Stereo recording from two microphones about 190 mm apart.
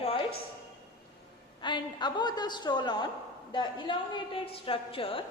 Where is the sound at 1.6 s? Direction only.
25° left (ahead or behind).